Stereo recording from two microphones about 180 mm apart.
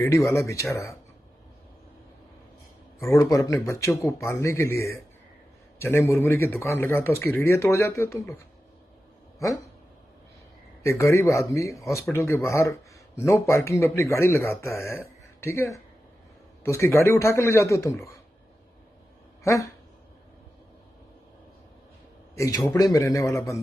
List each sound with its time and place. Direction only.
0.0 s speech: 15° left (ahead or behind)
3.2 s speech: 15° left (ahead or behind)
10.8 s speech: 15° left (ahead or behind)
19.4 s speech: 15° left (ahead or behind)
22.4 s speech: 15° left (ahead or behind)